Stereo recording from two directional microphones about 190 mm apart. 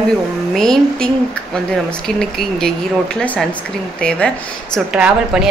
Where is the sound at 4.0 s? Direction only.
5° left (ahead or behind).